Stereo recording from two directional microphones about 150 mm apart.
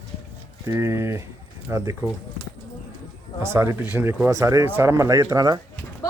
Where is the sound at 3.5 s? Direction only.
15° right (ahead or behind).